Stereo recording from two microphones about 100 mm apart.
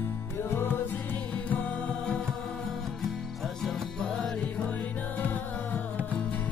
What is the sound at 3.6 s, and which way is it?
Music, 5° left (ahead or behind).